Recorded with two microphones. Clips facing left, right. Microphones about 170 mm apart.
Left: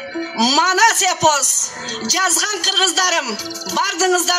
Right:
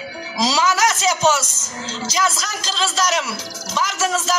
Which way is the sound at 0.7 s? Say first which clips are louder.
Left 3 dB; 70° left (ahead or behind).